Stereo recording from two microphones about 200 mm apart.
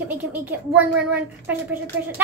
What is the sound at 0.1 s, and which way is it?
Speech, 10° right (ahead or behind).